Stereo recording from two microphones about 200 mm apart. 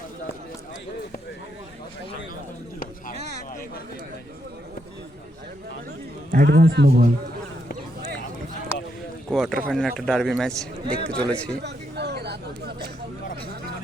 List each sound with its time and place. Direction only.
2.7 s a sound: 45° left (ahead or behind)
6.3 s speech: 50° right (ahead or behind)
9.3 s speech: centre (ahead or behind)
11.0 s speech: 55° right (ahead or behind)
11.3 s speech: 5° left (ahead or behind)
11.6 s a sound: 55° right (ahead or behind)